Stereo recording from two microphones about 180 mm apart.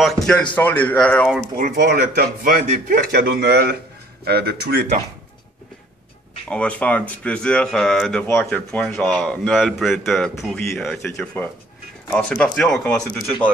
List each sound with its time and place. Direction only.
0.0 s speech: 5° left (ahead or behind)
1.6 s speech: 55° right (ahead or behind)
3.1 s speech: 60° right (ahead or behind)
6.5 s speech: 5° left (ahead or behind)